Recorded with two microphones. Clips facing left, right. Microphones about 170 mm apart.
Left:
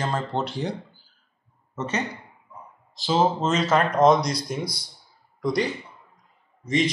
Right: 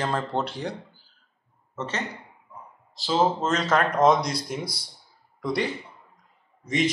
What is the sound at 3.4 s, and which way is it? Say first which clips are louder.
Speech: left 2 dB; 5° left (ahead or behind).